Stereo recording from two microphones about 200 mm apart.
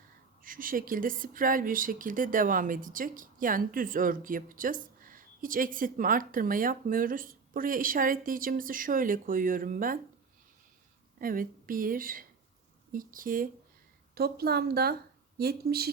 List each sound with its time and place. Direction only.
0.4 s speech: 45° right (ahead or behind)
11.2 s speech: 45° right (ahead or behind)